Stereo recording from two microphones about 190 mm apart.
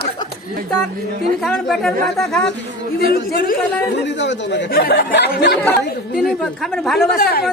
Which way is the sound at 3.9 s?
65° left (ahead or behind).